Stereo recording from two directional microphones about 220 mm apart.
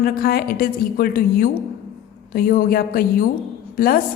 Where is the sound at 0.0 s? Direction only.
45° left (ahead or behind).